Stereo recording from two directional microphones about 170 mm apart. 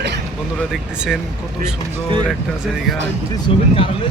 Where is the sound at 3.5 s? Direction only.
30° left (ahead or behind).